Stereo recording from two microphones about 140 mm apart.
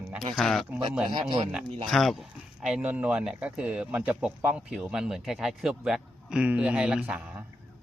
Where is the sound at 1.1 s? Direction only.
35° right (ahead or behind).